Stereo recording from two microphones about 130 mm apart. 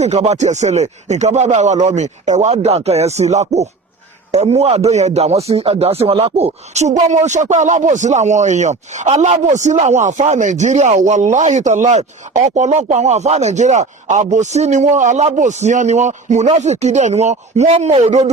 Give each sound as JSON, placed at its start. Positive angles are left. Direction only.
{"t": 0.0, "sound": "a man's voice", "side_deg": -55}
{"t": 7.1, "sound": "a man's voice", "side_deg": -65}